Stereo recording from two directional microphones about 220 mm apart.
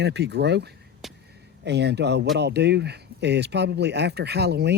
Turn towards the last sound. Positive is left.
turn(degrees=-50)  # may be behind; listen again after turning